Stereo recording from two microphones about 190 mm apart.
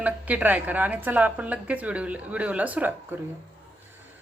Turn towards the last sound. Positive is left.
turn(degrees=-10)  # may be behind; listen again after turning